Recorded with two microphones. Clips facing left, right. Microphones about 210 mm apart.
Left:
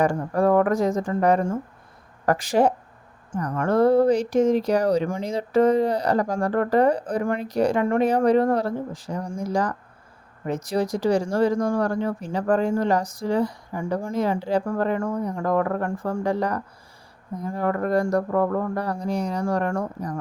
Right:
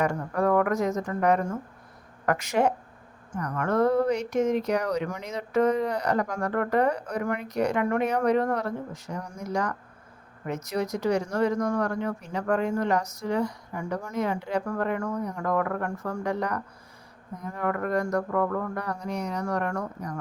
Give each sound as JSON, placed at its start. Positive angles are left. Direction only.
{"t": 0.0, "sound": "speech", "side_deg": 30}